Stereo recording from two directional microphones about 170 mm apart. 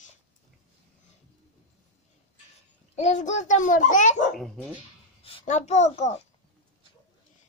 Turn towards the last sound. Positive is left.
turn(degrees=40)  # may be behind; listen again after turning